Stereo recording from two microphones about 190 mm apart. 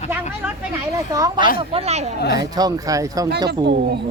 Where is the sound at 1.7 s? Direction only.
35° right (ahead or behind).